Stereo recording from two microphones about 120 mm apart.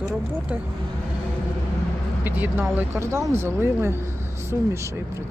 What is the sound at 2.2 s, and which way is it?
Speech, 15° right (ahead or behind).